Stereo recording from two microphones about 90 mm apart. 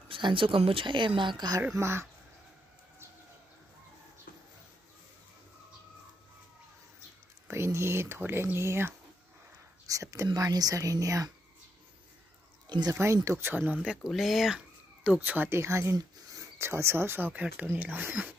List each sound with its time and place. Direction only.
0.1 s speech: 70° right (ahead or behind); by 1.6 s 55° right (ahead or behind)
1.8 s speech: 30° right (ahead or behind)
7.4 s speech: 30° right (ahead or behind)
12.6 s speech: 50° right (ahead or behind)
12.9 s speech: 30° right (ahead or behind)
13.8 s speech: centre (ahead or behind)
15.0 s speech: 20° right (ahead or behind)
17.3 s speech: 15° right (ahead or behind)